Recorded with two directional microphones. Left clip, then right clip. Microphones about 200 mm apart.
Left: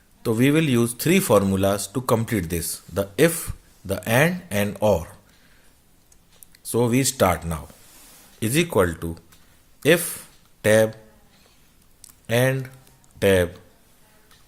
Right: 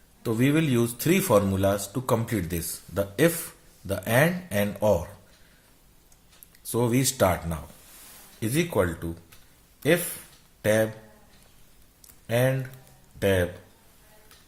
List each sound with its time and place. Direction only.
0.2 s a man's voice: 45° left (ahead or behind)
6.5 s a man's voice: 35° left (ahead or behind)
12.3 s speech: 50° left (ahead or behind)